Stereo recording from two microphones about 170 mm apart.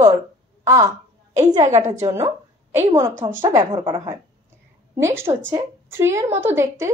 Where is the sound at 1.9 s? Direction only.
15° right (ahead or behind).